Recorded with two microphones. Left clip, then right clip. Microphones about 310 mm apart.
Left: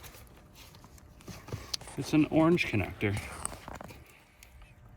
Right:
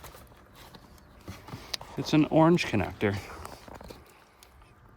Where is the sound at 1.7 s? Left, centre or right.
Right.